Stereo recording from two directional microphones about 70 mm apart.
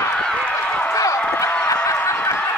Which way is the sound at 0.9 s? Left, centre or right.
Left.